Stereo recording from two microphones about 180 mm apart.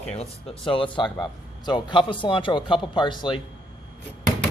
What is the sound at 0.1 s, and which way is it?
A man's voice, 35° left (ahead or behind).